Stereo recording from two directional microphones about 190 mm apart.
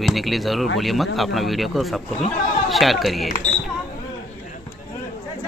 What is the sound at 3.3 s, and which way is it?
Speech, 45° left (ahead or behind).